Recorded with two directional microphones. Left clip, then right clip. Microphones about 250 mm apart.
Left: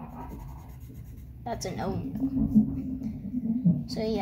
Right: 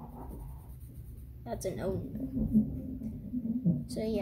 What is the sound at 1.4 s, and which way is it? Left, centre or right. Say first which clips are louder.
Speech: left 3 dB; right.